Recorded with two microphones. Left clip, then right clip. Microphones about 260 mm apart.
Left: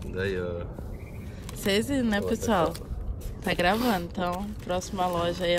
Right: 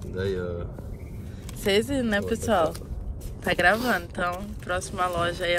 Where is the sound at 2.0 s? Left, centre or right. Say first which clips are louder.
Right 2 dB; centre.